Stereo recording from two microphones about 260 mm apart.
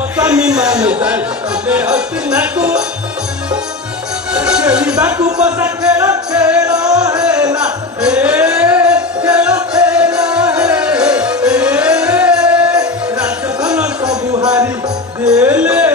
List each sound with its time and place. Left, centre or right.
0.2 s speech: centre
4.3 s music: centre
14.0 s a sound: centre
15.2 s music: centre